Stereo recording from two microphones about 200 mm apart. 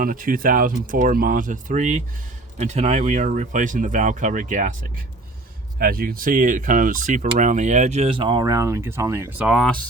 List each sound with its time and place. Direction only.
0.0 s speech: 45° right (ahead or behind)
5.8 s speech: 50° right (ahead or behind); by 9.5 s 15° right (ahead or behind)
9.5 s speech: centre (ahead or behind)